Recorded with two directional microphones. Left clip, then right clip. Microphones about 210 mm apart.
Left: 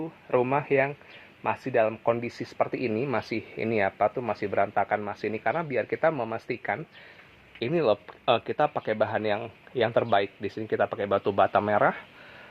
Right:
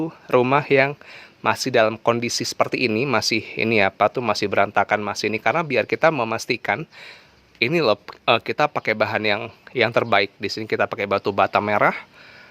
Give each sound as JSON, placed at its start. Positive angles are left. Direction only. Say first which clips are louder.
{"t": 0.0, "sound": "speech", "louder": "right 7 dB", "side_deg": -55}
{"t": 2.2, "sound": "speech", "louder": "right 7 dB", "side_deg": -35}
{"t": 5.5, "sound": "speech", "louder": "right 7 dB", "side_deg": -50}
{"t": 7.6, "sound": "speech", "louder": "right 6 dB", "side_deg": -25}